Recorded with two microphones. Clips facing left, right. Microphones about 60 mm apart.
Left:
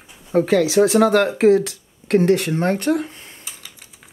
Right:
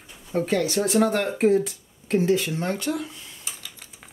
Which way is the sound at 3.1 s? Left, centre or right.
Left.